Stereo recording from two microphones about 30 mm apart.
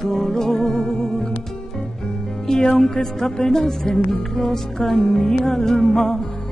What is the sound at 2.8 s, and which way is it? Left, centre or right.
Music, centre.